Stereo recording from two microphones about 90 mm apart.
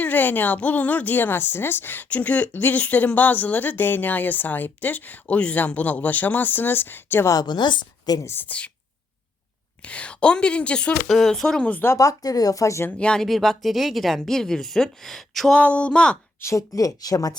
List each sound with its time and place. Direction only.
0.0 s speech: 20° left (ahead or behind)
7.3 s speech: 50° left (ahead or behind)
8.2 s speech: 25° left (ahead or behind)
9.8 s a woman's voice: 15° left (ahead or behind)
11.9 s speech: 40° left (ahead or behind)
13.0 s speech: 10° left (ahead or behind)
15.5 s a woman's voice: 15° left (ahead or behind)
16.4 s speech: 35° left (ahead or behind)